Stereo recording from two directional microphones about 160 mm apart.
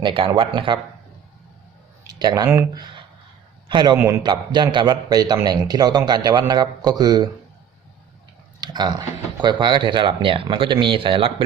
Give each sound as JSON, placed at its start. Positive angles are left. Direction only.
{"t": 0.0, "sound": "speech", "side_deg": -35}
{"t": 2.0, "sound": "a man's voice", "side_deg": -25}
{"t": 3.9, "sound": "a man's voice", "side_deg": -15}
{"t": 4.2, "sound": "a man's voice", "side_deg": -25}
{"t": 8.6, "sound": "a man's voice", "side_deg": -25}